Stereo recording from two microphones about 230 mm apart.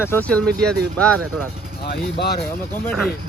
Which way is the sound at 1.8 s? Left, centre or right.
Left.